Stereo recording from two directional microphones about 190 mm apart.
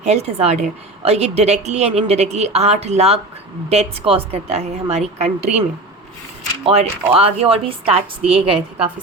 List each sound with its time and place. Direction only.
0.0 s a woman's voice: 35° right (ahead or behind)
6.7 s a woman's voice: 30° right (ahead or behind)